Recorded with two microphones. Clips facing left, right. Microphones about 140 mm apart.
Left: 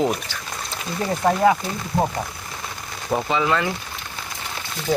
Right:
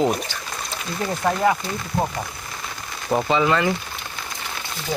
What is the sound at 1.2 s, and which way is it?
Speech, 15° left (ahead or behind).